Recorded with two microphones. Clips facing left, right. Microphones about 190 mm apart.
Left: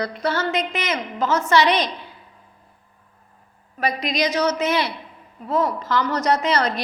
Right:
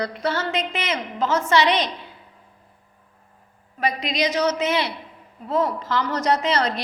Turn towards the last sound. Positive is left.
turn(degrees=-25)  # may be behind; listen again after turning